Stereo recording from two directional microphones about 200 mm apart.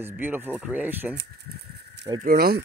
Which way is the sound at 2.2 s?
50° right (ahead or behind).